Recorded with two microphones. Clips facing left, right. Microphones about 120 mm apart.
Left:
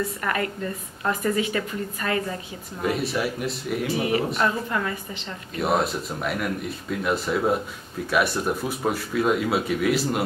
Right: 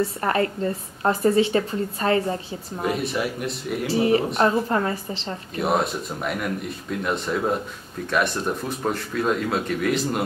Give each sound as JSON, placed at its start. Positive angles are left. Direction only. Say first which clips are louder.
{"t": 0.0, "sound": "a woman's voice", "louder": "right 4 dB", "side_deg": -30}
{"t": 2.8, "sound": "speech", "louder": "even", "side_deg": 0}
{"t": 3.8, "sound": "a woman's voice", "louder": "right 5 dB", "side_deg": -30}
{"t": 5.6, "sound": "speech", "louder": "even", "side_deg": 0}